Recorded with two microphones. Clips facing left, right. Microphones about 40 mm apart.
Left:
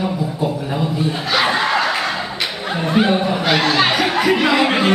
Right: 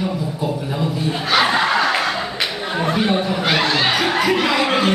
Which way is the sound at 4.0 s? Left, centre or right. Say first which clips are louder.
Left 1 dB; centre.